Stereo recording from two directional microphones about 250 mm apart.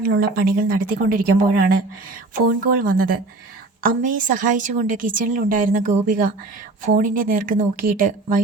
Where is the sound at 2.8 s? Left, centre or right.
Right.